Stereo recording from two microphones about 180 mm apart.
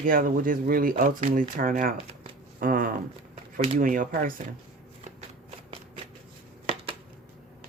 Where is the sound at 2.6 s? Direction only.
50° right (ahead or behind).